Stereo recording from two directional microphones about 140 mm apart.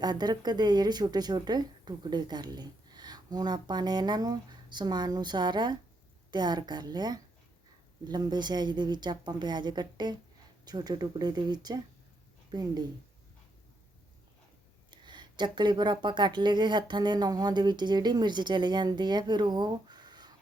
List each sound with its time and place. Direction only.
0.0 s a woman's voice: 30° right (ahead or behind)
14.8 s speech: 35° right (ahead or behind)